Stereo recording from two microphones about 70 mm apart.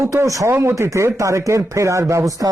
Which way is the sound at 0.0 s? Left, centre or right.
Right.